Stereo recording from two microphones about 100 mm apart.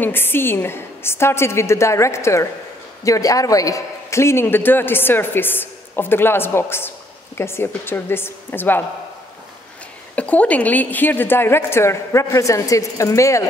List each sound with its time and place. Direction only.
0.0 s a man's voice: 20° left (ahead or behind)
10.1 s a man's voice: 15° left (ahead or behind); by 13.4 s 30° left (ahead or behind)